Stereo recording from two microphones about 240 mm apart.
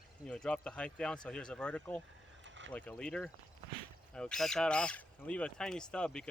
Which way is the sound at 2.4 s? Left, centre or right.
Right.